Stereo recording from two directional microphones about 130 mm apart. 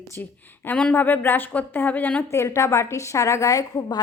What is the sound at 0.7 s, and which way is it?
A woman's voice, 10° left (ahead or behind).